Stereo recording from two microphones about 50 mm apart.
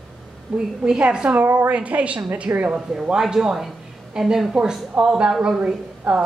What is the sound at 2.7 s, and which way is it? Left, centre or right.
A woman's voice, centre.